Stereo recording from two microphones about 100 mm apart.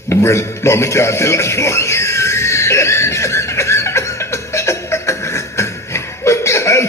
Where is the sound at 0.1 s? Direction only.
30° left (ahead or behind).